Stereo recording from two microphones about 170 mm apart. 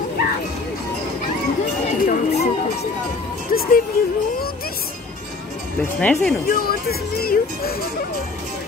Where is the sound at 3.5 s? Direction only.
55° left (ahead or behind).